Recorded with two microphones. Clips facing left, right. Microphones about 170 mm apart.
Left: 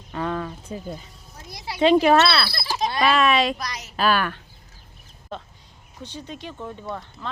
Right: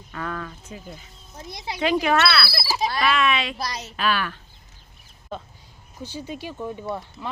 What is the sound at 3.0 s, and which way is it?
Speech, 40° left (ahead or behind).